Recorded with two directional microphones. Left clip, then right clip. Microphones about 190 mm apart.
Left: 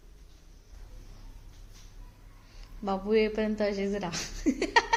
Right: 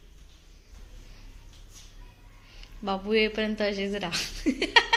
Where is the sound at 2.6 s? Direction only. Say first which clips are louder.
Right 1 dB; 5° left (ahead or behind).